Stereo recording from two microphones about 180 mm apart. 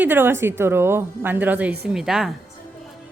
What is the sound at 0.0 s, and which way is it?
Speech, 10° right (ahead or behind).